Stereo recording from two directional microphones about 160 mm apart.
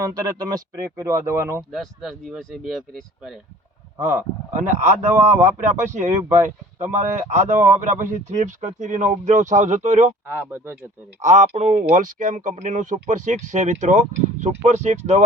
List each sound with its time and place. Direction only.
0.0 s speech: 25° right (ahead or behind)
1.7 s speech: centre (ahead or behind)
4.5 s speech: 50° right (ahead or behind)
11.2 s speech: 50° right (ahead or behind)